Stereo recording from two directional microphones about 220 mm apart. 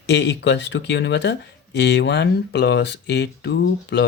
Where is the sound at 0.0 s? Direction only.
50° left (ahead or behind).